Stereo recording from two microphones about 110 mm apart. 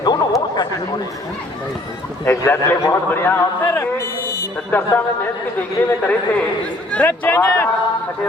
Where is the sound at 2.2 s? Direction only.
20° left (ahead or behind).